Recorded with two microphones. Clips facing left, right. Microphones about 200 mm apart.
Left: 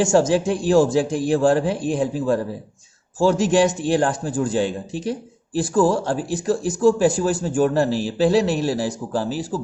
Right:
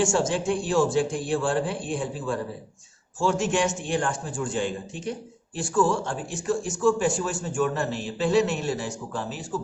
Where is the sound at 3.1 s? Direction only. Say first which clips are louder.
Left 7 dB; 35° left (ahead or behind).